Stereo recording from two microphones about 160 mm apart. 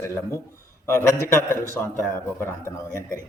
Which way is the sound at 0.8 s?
15° left (ahead or behind).